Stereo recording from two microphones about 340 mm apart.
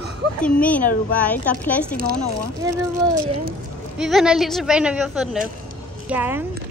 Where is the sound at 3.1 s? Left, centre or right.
Right.